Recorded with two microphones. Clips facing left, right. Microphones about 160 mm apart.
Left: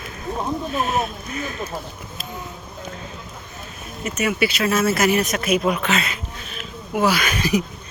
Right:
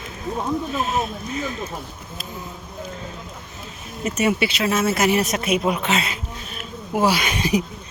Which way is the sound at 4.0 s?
30° right (ahead or behind).